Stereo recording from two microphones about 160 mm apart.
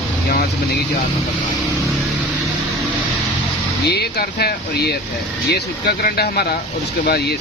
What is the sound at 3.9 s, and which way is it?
Speech, 90° left.